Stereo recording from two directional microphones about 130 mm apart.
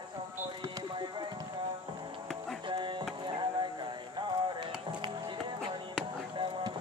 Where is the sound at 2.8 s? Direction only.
35° right (ahead or behind).